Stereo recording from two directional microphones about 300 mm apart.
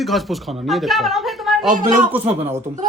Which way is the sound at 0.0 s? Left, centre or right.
Centre.